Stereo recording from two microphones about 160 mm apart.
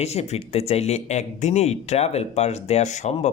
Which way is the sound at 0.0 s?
40° left (ahead or behind).